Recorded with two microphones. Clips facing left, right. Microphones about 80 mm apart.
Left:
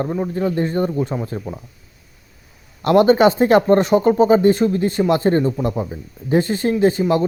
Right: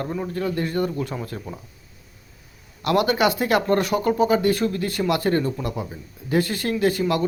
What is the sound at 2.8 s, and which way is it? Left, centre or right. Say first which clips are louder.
Speech: left 7 dB; left.